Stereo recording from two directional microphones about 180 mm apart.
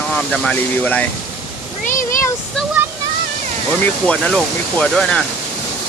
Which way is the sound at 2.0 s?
15° left (ahead or behind).